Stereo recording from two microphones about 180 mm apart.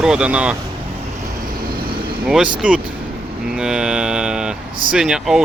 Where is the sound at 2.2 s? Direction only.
5° right (ahead or behind).